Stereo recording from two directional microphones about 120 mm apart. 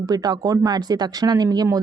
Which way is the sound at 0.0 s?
30° right (ahead or behind).